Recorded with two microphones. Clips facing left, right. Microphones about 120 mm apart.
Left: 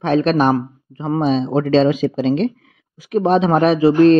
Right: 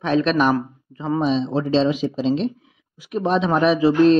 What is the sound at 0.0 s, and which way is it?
Speech, 45° left (ahead or behind).